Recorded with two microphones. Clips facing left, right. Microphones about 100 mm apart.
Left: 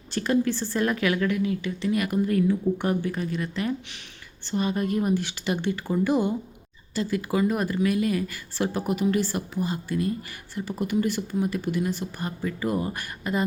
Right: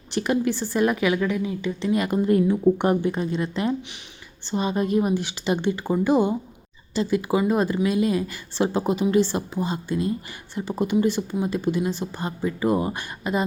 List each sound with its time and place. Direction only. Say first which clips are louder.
0.1 s speech: right 1 dB; 15° right (ahead or behind)